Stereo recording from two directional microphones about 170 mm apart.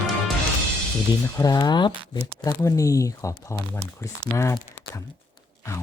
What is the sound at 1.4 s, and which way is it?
Speech, 25° left (ahead or behind).